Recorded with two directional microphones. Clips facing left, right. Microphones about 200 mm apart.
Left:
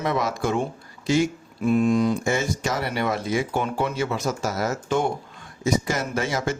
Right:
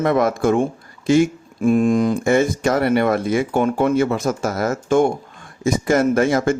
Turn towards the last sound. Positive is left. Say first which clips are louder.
# right 9 dB
turn(degrees=-55)  # may be behind; listen again after turning